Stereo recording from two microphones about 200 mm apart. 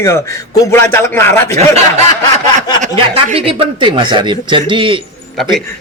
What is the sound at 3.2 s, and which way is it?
Speech, 30° right (ahead or behind).